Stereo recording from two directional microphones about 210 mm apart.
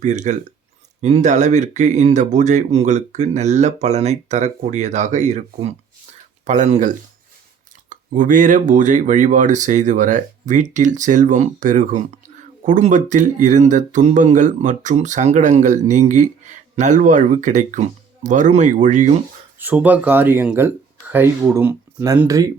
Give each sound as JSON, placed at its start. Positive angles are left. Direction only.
{"t": 0.0, "sound": "speech", "side_deg": -35}
{"t": 19.5, "sound": "speech", "side_deg": -10}